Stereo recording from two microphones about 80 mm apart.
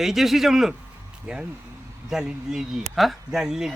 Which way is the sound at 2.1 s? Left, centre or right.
Centre.